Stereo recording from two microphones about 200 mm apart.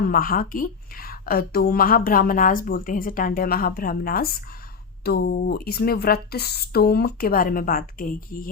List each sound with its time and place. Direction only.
0.0 s a woman's voice: 45° left (ahead or behind)